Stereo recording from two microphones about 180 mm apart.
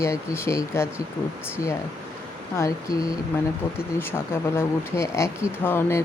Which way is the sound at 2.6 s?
20° left (ahead or behind).